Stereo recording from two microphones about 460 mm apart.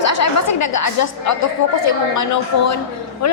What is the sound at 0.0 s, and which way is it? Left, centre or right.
A woman's voice, left.